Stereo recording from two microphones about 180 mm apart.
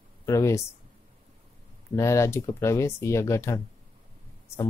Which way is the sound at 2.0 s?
15° left (ahead or behind).